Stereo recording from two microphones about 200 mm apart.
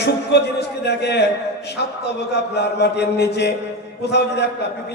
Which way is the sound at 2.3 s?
55° left (ahead or behind).